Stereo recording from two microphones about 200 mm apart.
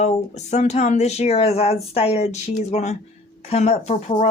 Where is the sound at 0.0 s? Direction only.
35° left (ahead or behind).